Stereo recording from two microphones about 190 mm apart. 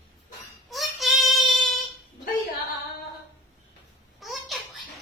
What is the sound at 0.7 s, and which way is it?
Child singing, centre (ahead or behind).